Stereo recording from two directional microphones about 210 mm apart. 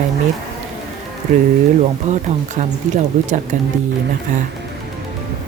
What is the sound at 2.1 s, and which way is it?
Speech, 35° right (ahead or behind).